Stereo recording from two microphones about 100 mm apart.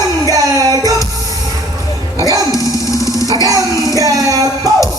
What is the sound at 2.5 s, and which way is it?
Music, 35° left (ahead or behind).